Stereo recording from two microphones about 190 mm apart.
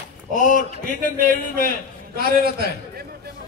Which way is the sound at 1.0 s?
50° right (ahead or behind).